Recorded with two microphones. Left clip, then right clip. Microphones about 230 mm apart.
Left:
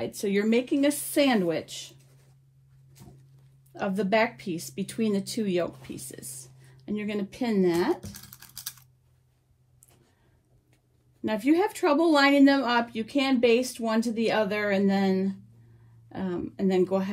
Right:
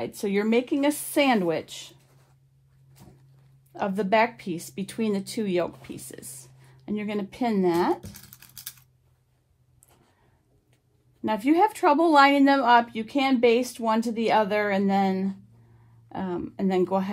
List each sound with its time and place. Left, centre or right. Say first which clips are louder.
0.0 s speech: right 1 dB; right
3.0 s a sound: even; centre
3.7 s speech: right 2 dB; right
8.0 s toothbrush: left 1 dB; centre
11.2 s speech: right 3 dB; right